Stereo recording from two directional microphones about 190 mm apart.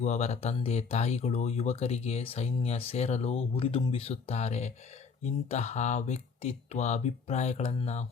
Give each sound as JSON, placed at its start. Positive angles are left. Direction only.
{"t": 0.0, "sound": "speech", "side_deg": 35}